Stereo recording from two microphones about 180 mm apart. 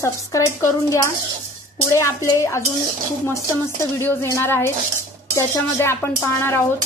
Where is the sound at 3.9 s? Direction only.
15° left (ahead or behind).